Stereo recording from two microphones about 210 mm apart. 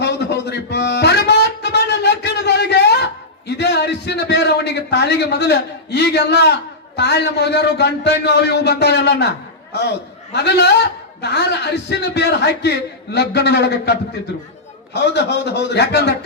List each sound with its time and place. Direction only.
0.0 s music: 50° left (ahead or behind)
9.7 s a man's voice: 55° left (ahead or behind)
14.9 s a man's voice: 50° left (ahead or behind)